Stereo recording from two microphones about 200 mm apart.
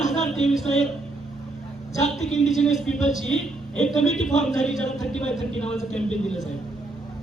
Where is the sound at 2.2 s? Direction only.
35° left (ahead or behind).